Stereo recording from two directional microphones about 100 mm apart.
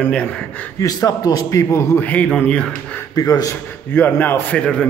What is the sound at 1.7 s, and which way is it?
Speech, 25° left (ahead or behind).